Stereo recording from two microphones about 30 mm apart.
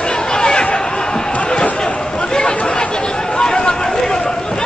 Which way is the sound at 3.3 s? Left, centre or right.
Left.